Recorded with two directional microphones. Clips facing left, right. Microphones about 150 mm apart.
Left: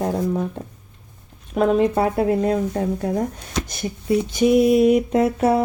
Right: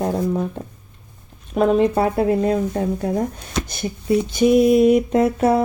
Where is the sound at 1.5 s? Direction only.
25° right (ahead or behind).